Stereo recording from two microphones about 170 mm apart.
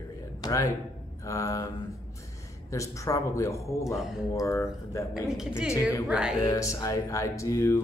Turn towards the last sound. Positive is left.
turn(degrees=15)  # may be behind; listen again after turning